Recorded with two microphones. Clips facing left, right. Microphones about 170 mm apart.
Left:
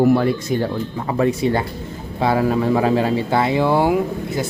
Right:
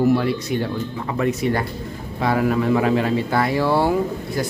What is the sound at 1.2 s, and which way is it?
Speech, 25° left (ahead or behind).